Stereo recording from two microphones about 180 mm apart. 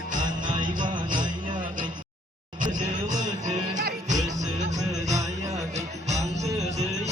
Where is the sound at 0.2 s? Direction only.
25° right (ahead or behind).